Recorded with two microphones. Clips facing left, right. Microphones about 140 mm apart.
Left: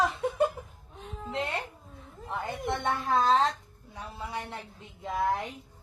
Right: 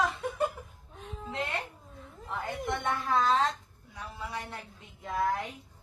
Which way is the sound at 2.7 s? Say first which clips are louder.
Left 2 dB; 30° left (ahead or behind).